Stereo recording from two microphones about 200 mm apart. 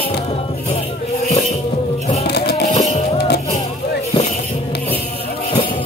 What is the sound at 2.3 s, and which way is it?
Music, 55° left (ahead or behind).